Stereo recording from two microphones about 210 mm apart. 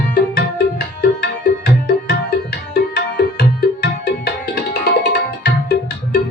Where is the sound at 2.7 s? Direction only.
45° left (ahead or behind).